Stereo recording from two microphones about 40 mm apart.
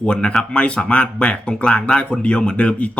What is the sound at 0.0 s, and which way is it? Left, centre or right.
Speech, left.